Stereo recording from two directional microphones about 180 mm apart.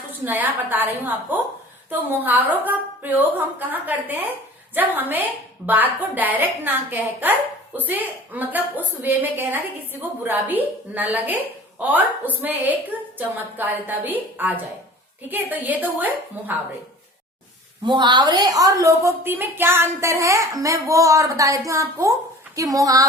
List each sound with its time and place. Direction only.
0.1 s a woman's voice: 10° right (ahead or behind)
17.8 s a woman's voice: 25° right (ahead or behind)